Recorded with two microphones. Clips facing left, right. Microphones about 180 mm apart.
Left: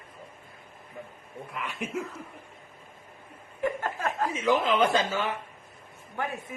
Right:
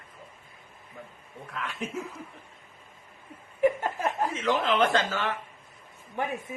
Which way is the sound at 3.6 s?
15° right (ahead or behind).